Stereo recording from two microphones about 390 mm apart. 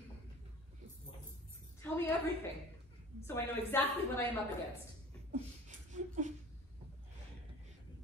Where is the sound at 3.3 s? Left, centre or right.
Centre.